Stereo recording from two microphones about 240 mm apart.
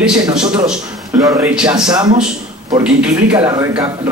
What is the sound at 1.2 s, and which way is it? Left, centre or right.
Speech, centre.